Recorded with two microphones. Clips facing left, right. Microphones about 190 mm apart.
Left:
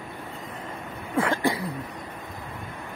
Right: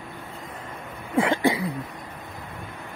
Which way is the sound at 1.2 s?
15° right (ahead or behind).